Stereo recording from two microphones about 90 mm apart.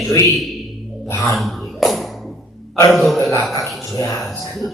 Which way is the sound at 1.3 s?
Centre (ahead or behind).